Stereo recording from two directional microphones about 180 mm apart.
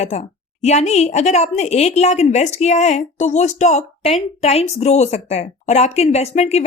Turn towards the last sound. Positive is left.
turn(degrees=35)  # may be behind; listen again after turning